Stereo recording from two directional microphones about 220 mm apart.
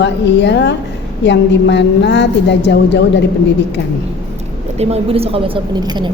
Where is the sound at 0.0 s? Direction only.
50° left (ahead or behind).